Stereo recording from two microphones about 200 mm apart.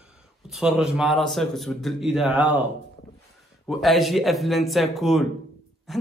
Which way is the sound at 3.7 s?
Centre (ahead or behind).